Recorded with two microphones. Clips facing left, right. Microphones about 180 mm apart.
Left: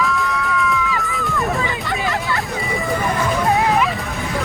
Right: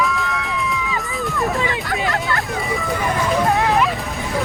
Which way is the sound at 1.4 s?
Centre (ahead or behind).